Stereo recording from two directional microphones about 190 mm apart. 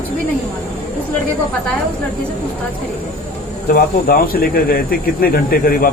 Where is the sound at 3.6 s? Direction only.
50° left (ahead or behind).